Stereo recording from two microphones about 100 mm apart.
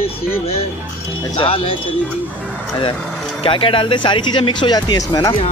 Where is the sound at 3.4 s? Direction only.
60° left (ahead or behind).